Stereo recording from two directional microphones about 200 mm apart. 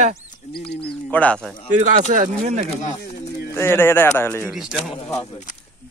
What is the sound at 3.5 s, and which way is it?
Speech, 10° left (ahead or behind).